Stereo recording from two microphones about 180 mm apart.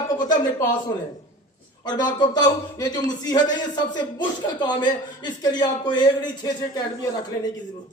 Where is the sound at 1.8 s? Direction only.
25° left (ahead or behind).